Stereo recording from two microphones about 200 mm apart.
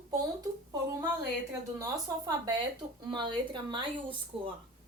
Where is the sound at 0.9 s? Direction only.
15° right (ahead or behind).